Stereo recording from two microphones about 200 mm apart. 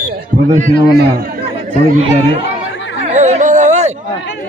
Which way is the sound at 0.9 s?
50° right (ahead or behind).